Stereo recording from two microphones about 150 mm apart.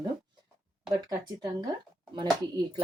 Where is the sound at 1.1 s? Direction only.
25° right (ahead or behind).